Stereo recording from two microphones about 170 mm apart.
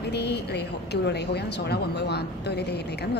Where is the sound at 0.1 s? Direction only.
80° left.